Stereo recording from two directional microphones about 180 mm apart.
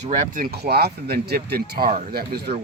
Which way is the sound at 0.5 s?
60° right (ahead or behind).